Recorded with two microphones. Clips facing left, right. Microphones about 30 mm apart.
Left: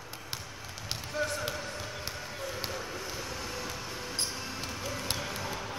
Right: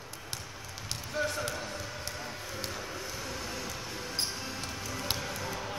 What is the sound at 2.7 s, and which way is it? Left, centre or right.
Vehicle, centre.